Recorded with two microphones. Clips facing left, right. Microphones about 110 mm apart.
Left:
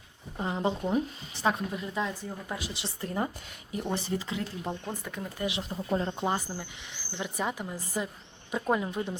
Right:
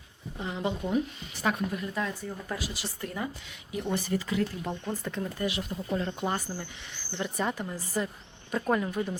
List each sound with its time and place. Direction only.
0.3 s speech: 35° left (ahead or behind); by 5.5 s 10° left (ahead or behind)
5.5 s speech: 25° left (ahead or behind)
6.6 s speech: 10° left (ahead or behind)